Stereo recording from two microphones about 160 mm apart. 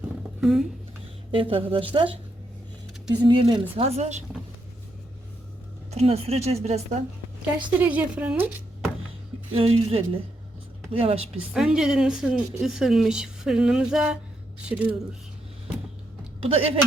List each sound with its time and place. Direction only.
0.4 s a woman's voice: centre (ahead or behind)
1.3 s speech: 35° right (ahead or behind)
3.1 s speech: 30° right (ahead or behind)
5.9 s speech: 40° right (ahead or behind)
7.8 s a woman's voice: 10° right (ahead or behind)
9.5 s speech: 35° right (ahead or behind)
11.3 s a woman's voice: 5° right (ahead or behind)
16.4 s speech: 35° right (ahead or behind)